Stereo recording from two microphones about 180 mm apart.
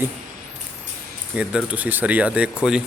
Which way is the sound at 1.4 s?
5° right (ahead or behind).